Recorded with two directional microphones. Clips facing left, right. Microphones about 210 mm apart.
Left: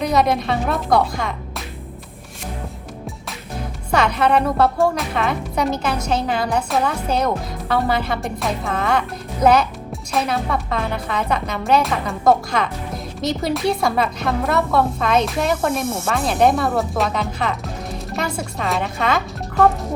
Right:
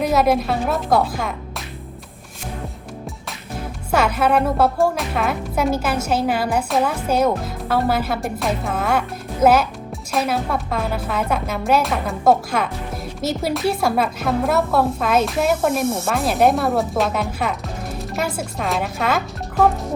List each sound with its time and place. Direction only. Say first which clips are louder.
0.0 s a woman's voice: right 1 dB; 5° right (ahead or behind)
3.9 s a woman's voice: even; 5° right (ahead or behind)